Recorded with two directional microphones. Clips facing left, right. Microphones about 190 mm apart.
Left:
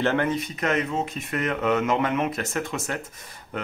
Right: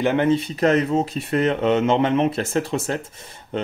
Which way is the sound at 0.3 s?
30° right (ahead or behind).